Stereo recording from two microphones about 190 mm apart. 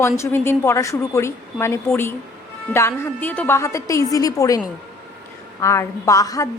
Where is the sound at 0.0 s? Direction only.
15° left (ahead or behind).